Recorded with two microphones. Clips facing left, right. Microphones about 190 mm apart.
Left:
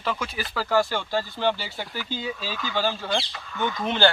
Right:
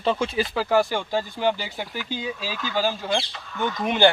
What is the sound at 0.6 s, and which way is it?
Speech, 15° right (ahead or behind).